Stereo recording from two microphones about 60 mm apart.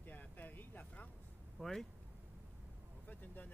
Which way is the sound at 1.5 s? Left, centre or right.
Centre.